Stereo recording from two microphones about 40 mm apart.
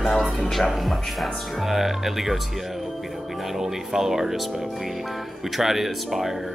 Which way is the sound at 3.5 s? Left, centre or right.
Centre.